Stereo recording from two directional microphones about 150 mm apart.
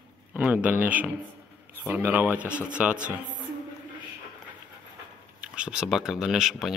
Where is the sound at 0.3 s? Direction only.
10° right (ahead or behind).